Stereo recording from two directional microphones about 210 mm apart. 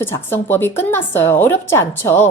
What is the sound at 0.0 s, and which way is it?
A woman's voice, 10° left (ahead or behind).